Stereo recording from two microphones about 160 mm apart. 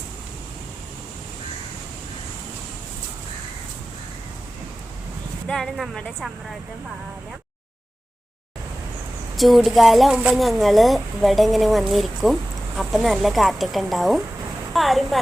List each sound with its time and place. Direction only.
5.5 s a woman's voice: centre (ahead or behind)
9.3 s a woman's voice: centre (ahead or behind)